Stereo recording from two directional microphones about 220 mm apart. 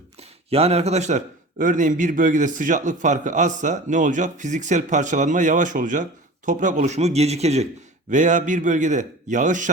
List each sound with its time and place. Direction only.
0.2 s a man's voice: 30° right (ahead or behind)